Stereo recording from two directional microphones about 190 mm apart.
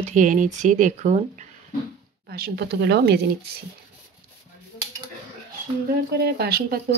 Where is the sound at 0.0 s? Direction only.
40° right (ahead or behind).